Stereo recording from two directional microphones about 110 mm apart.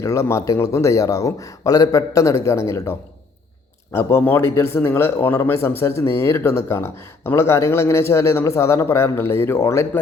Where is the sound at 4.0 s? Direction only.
20° left (ahead or behind).